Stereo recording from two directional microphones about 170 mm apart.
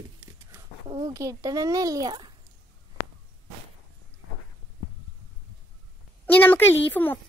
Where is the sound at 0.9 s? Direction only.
20° right (ahead or behind).